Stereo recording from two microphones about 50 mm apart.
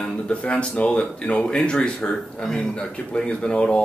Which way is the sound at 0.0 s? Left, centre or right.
Left.